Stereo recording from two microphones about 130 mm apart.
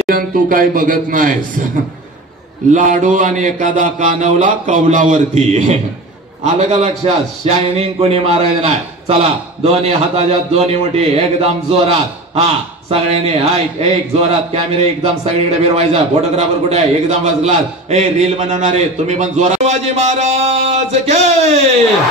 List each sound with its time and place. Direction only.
0.1 s speech: 90° right
2.7 s a sound: 75° right (ahead or behind); by 5.8 s 60° right (ahead or behind)
6.4 s a man's voice: 55° right (ahead or behind)